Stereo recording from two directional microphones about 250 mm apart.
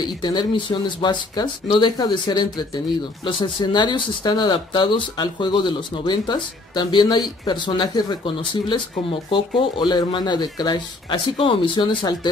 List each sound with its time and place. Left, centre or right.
0.0 s speech: centre
9.3 s speech: centre